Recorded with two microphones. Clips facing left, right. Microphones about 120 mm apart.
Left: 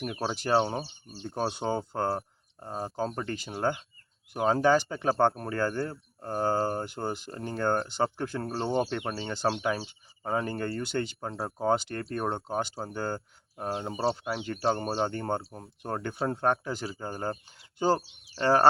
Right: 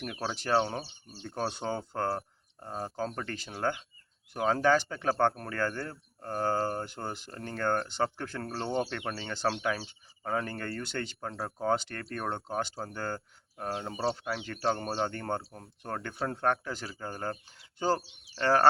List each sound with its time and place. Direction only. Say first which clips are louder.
0.2 s speech: left 2 dB; 15° left (ahead or behind)